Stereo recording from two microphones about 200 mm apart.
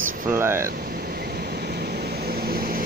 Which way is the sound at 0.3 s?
10° right (ahead or behind).